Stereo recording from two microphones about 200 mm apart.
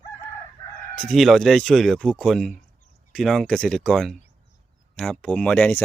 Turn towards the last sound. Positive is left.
turn(degrees=5)  # may be behind; listen again after turning